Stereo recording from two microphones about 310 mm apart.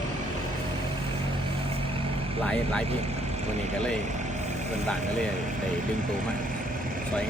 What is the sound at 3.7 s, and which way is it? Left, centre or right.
Vehicle, right.